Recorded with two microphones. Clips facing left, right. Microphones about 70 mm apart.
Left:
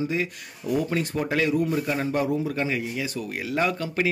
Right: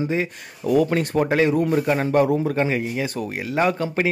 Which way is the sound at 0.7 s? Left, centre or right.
Right.